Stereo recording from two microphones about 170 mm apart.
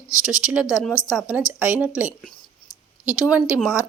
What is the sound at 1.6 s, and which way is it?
Speech, 5° right (ahead or behind).